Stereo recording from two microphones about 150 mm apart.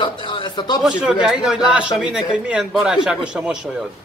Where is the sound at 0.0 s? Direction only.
35° left (ahead or behind).